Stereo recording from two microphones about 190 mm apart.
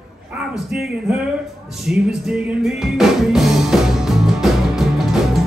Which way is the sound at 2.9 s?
Centre (ahead or behind).